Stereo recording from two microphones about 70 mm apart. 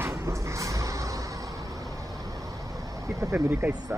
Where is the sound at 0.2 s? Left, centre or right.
Right.